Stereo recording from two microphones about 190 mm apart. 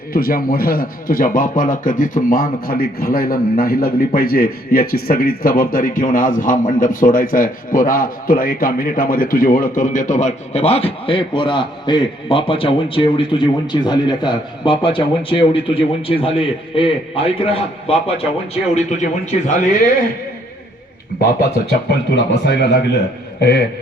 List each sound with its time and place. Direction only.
0.1 s a man's voice: 50° left (ahead or behind)
21.7 s speech: 65° left (ahead or behind)